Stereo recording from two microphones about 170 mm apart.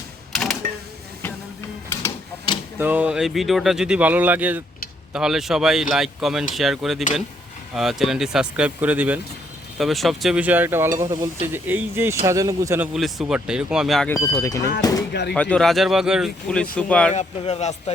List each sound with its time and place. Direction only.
0.6 s music: 55° right (ahead or behind)
1.9 s printer: 20° left (ahead or behind)
2.7 s speech: 10° right (ahead or behind)
12.9 s speech: centre (ahead or behind)
14.1 s speech: 15° left (ahead or behind)
15.3 s speech: 5° left (ahead or behind)
17.2 s a man's voice: 40° left (ahead or behind)